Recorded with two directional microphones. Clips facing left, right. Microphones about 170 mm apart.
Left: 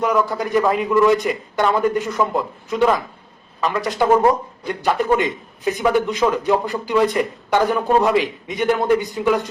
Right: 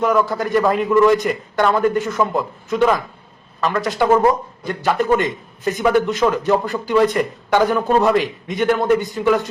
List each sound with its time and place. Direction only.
0.0 s a man's voice: centre (ahead or behind)